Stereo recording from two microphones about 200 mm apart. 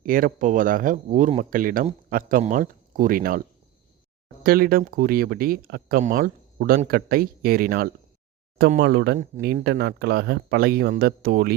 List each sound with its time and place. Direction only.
0.0 s speech: 45° right (ahead or behind)
4.4 s speech: 50° right (ahead or behind)
9.1 s speech: 45° right (ahead or behind)